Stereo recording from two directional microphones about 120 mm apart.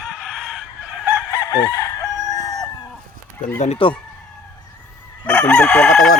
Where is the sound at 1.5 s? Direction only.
30° left (ahead or behind).